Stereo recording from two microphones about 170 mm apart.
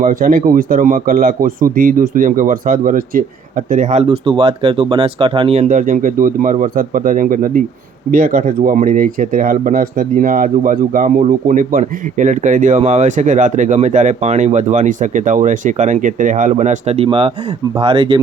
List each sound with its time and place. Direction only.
0.0 s speech: 55° right (ahead or behind); by 18.2 s 30° right (ahead or behind)